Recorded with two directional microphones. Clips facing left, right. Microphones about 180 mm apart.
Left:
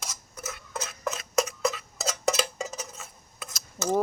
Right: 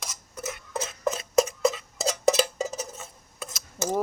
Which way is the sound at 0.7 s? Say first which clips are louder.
Right 5 dB; 30° right (ahead or behind).